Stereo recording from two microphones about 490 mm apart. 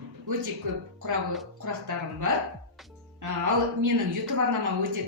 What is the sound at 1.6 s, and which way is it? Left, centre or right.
A woman's voice, right.